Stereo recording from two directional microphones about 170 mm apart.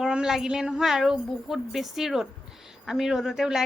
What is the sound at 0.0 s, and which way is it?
A woman's voice, 5° right (ahead or behind).